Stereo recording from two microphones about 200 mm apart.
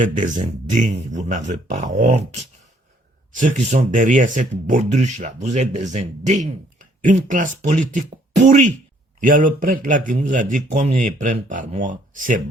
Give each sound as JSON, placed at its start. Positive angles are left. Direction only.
{"t": 0.3, "sound": "speech", "side_deg": -40}